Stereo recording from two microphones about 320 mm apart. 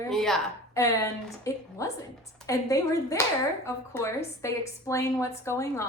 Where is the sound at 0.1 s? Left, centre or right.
Centre.